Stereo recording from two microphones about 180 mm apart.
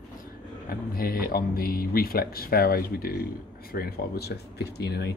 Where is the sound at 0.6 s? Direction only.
55° left (ahead or behind).